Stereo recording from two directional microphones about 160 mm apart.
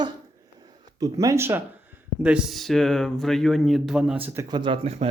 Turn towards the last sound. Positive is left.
turn(degrees=-40)  # may be behind; listen again after turning